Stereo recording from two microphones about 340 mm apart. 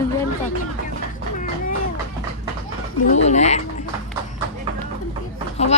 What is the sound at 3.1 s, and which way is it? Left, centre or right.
Speech, centre.